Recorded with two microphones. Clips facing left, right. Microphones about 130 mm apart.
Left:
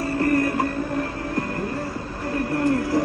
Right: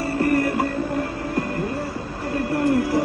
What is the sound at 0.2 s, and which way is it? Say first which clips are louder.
Music: right 1 dB; 25° right (ahead or behind).